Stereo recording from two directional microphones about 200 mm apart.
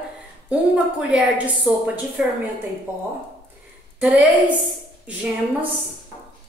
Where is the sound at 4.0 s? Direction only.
5° right (ahead or behind).